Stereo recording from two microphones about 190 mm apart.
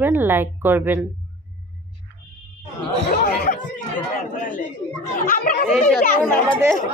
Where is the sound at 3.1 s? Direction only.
45° left (ahead or behind).